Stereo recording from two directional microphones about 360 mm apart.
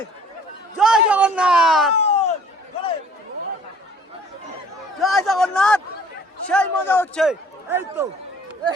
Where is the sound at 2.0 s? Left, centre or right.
Centre.